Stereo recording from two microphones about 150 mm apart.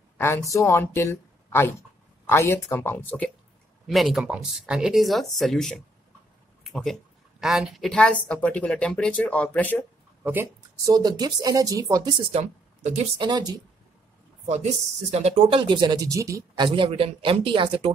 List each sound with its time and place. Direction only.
0.2 s a woman's voice: 20° left (ahead or behind)
3.8 s a woman's voice: centre (ahead or behind)
10.2 s speech: 15° right (ahead or behind)
10.9 s speech: 25° right (ahead or behind)
12.3 s speech: 45° right (ahead or behind)
13.2 s speech: 25° right (ahead or behind)
14.4 s speech: 50° right (ahead or behind); by 17.9 s 35° right (ahead or behind)